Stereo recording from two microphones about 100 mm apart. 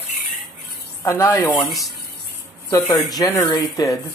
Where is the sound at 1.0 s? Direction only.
30° left (ahead or behind).